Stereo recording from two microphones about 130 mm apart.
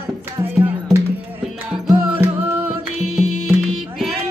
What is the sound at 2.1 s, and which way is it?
Music, 15° right (ahead or behind).